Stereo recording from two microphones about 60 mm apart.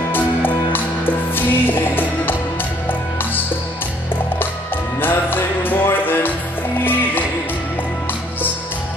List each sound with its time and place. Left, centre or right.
0.1 s music: left
5.0 s music: left